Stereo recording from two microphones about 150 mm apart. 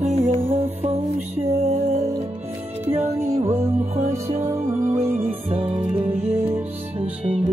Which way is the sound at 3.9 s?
50° right (ahead or behind).